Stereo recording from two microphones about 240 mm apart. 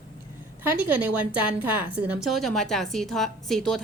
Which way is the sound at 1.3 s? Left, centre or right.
Centre.